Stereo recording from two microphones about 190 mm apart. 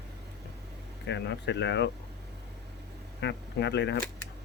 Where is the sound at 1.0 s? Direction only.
65° left (ahead or behind).